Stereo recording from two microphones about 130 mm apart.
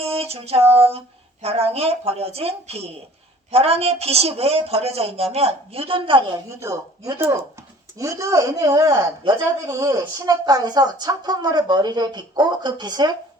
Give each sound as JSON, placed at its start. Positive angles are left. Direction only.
{"t": 0.0, "sound": "a sound", "side_deg": -50}
{"t": 0.8, "sound": "a woman's voice", "side_deg": -50}
{"t": 6.5, "sound": "a woman's voice", "side_deg": -20}